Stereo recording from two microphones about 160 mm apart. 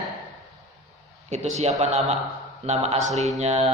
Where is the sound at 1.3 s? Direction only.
45° right (ahead or behind).